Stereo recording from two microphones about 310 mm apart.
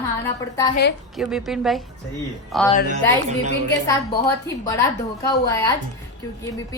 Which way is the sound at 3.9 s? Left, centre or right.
Centre.